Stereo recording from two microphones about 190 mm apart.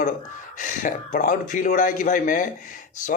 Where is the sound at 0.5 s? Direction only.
45° left (ahead or behind).